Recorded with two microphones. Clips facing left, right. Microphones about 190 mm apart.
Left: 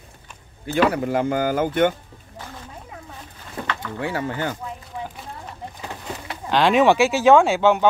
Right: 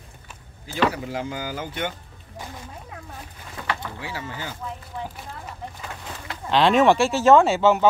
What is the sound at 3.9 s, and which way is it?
Speech, 55° left (ahead or behind).